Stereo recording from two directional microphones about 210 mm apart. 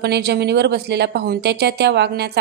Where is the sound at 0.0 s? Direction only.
50° right (ahead or behind).